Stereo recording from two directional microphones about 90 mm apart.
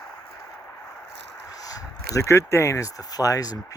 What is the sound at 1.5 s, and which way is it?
Speech, 45° left (ahead or behind).